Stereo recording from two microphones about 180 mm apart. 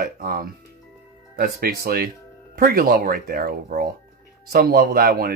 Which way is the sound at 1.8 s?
55° right (ahead or behind).